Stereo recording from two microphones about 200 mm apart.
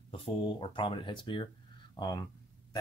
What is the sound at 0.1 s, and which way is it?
Speech, 25° left (ahead or behind).